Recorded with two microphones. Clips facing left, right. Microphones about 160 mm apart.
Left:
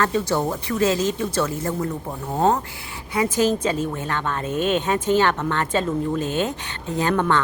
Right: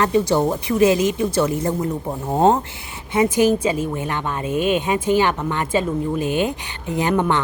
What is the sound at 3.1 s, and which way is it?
Speech, 20° right (ahead or behind).